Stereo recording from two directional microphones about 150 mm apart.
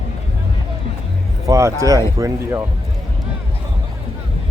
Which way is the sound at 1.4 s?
20° right (ahead or behind).